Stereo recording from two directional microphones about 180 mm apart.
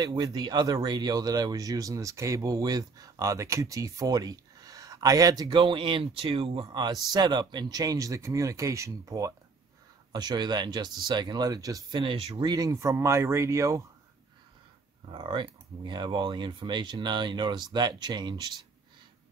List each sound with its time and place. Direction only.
0.0 s speech: 25° right (ahead or behind)
15.0 s speech: 25° right (ahead or behind)